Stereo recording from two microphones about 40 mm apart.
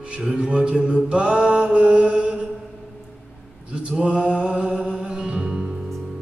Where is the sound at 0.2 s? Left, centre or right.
Right.